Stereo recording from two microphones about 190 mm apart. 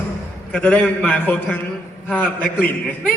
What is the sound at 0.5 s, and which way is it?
A man's voice, 5° left (ahead or behind).